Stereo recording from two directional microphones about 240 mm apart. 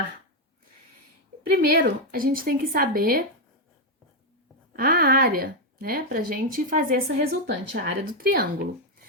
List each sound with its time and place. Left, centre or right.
1.6 s a woman's voice: right
4.8 s a woman's voice: right